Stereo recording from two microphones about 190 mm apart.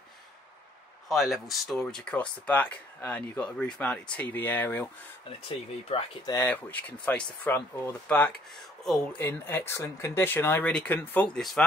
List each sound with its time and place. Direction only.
1.0 s speech: centre (ahead or behind)
5.9 s speech: 30° left (ahead or behind)
6.3 s speech: 10° left (ahead or behind)